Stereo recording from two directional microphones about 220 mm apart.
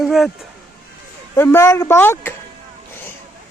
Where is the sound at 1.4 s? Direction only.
10° left (ahead or behind).